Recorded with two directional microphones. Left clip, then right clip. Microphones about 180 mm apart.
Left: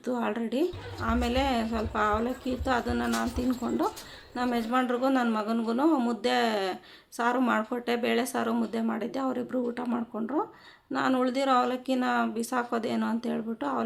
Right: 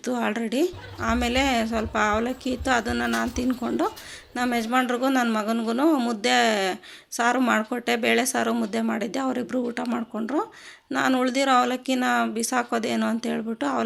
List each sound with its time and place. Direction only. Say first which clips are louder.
0.0 s a woman's voice: right 4 dB; 15° right (ahead or behind)